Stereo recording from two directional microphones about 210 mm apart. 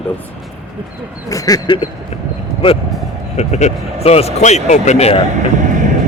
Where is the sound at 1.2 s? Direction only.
15° left (ahead or behind).